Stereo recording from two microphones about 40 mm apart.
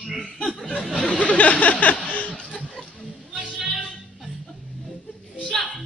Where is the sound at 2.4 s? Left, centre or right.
Centre.